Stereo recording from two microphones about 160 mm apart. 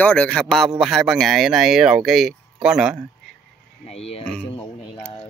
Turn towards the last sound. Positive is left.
turn(degrees=40)  # may be behind; listen again after turning